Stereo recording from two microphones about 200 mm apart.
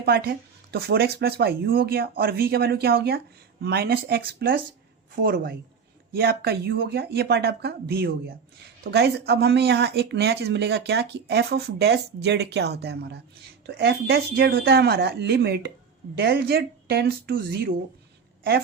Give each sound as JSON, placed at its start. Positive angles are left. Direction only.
{"t": 0.0, "sound": "speech", "side_deg": -50}